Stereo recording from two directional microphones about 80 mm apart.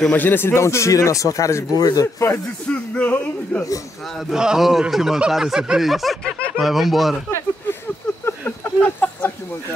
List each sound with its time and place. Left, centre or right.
0.0 s speech: left
1.8 s speech: left
2.7 s speech: centre
4.3 s speech: centre
8.3 s a sound: left